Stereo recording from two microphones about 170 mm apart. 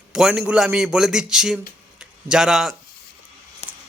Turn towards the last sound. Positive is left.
turn(degrees=40)  # may be behind; listen again after turning